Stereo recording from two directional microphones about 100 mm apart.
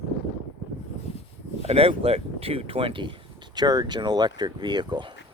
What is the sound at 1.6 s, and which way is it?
Speech, 85° right.